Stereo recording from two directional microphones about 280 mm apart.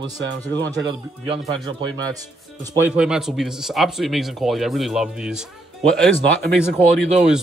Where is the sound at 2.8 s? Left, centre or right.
Centre.